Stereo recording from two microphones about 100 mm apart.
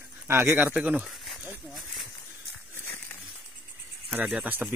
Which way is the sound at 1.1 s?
Centre (ahead or behind).